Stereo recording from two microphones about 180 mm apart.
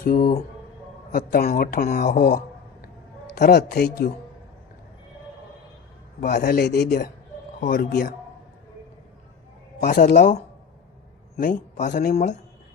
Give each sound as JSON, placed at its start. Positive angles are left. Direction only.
{"t": 0.0, "sound": "a woman's voice", "side_deg": 55}
{"t": 6.1, "sound": "a woman's voice", "side_deg": 55}
{"t": 7.6, "sound": "speech", "side_deg": 55}
{"t": 9.8, "sound": "a woman's voice", "side_deg": 60}
{"t": 10.1, "sound": "a man's voice", "side_deg": 40}